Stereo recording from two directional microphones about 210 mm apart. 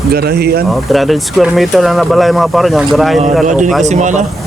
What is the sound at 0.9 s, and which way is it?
Speech, centre (ahead or behind).